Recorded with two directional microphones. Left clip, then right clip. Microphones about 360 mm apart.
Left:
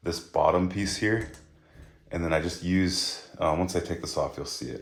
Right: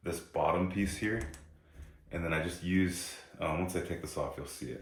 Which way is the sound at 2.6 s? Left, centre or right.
Left.